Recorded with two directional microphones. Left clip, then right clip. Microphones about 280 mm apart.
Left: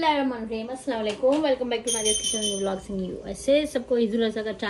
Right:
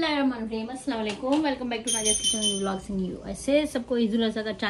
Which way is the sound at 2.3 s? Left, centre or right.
Centre.